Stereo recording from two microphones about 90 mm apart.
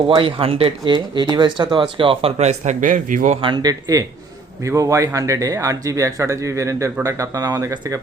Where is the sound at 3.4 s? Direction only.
50° right (ahead or behind).